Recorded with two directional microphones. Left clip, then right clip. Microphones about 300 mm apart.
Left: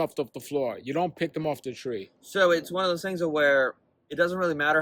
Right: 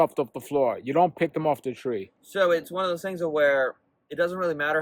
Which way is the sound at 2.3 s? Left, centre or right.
Centre.